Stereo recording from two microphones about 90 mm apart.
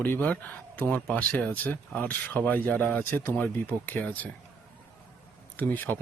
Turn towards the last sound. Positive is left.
turn(degrees=20)  # may be behind; listen again after turning